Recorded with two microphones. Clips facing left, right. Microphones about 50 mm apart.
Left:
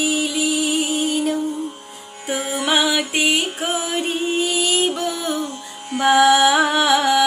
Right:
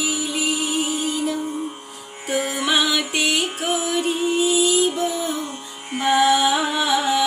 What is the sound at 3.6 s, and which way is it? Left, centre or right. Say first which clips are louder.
Music: right 1 dB; left.